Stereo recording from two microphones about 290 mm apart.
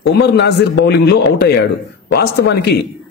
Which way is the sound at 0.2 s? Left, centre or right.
Left.